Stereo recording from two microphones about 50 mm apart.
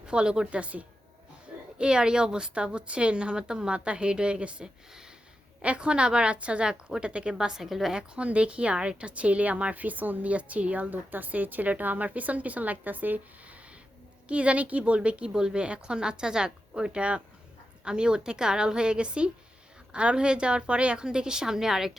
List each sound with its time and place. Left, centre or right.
0.0 s a woman's voice: centre
7.9 s a woman's voice: right